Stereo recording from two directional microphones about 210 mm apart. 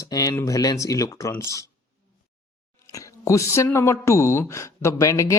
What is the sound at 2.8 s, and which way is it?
Speech, 15° left (ahead or behind).